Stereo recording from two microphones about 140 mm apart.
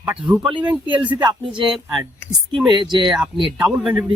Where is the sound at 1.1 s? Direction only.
30° right (ahead or behind).